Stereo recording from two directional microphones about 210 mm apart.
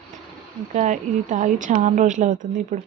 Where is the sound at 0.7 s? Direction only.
35° right (ahead or behind).